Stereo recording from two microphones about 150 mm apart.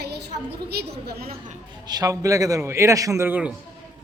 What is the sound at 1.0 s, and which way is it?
Speech, 85° right.